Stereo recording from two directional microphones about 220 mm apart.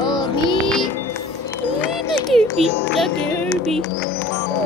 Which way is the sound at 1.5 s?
5° left (ahead or behind).